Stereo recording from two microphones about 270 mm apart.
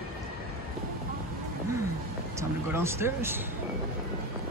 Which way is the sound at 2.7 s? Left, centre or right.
Centre.